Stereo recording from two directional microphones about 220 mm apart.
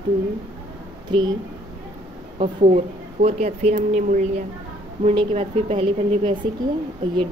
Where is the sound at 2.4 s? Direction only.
30° right (ahead or behind).